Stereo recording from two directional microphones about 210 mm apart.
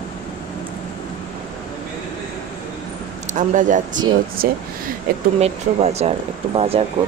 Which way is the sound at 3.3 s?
35° right (ahead or behind).